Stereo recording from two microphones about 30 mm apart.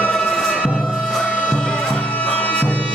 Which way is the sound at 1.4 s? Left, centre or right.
Left.